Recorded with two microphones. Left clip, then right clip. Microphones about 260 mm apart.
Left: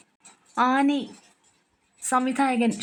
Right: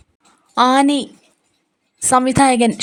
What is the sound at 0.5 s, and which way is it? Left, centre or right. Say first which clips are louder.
Speech: right 9 dB; centre.